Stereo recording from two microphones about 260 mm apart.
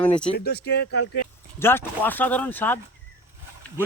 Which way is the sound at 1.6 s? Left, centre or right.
Centre.